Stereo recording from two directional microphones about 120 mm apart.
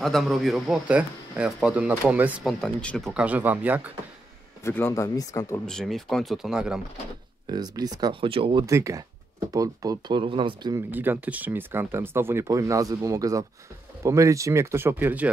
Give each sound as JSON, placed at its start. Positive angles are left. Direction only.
{"t": 0.0, "sound": "speech", "side_deg": 0}
{"t": 2.4, "sound": "speech", "side_deg": 10}
{"t": 3.1, "sound": "speech", "side_deg": -10}
{"t": 4.6, "sound": "speech", "side_deg": 20}
{"t": 5.7, "sound": "speech", "side_deg": 5}
{"t": 7.5, "sound": "speech", "side_deg": -35}
{"t": 8.1, "sound": "speech", "side_deg": -45}
{"t": 8.6, "sound": "speech", "side_deg": -25}
{"t": 10.9, "sound": "speech", "side_deg": -15}